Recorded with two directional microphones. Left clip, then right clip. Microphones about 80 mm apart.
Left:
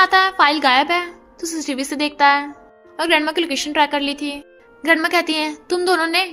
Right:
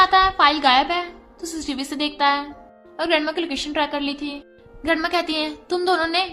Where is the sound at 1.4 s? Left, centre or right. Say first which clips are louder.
Left 4 dB; left.